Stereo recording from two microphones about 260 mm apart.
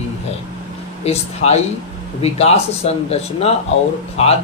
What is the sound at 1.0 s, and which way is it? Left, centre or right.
Speech, left.